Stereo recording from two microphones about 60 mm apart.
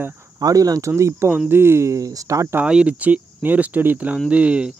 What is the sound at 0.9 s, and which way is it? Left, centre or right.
Speech, right.